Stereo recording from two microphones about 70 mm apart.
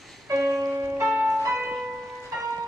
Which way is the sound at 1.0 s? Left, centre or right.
Centre.